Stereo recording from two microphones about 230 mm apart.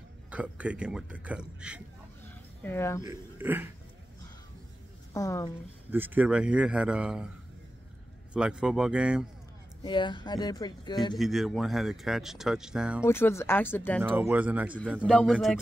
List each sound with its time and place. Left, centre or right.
0.3 s speech: centre
2.6 s speech: centre
3.0 s speech: centre
5.1 s speech: centre
5.9 s speech: centre
8.3 s speech: centre
9.8 s speech: left
11.1 s speech: centre
13.0 s speech: centre
14.0 s speech: centre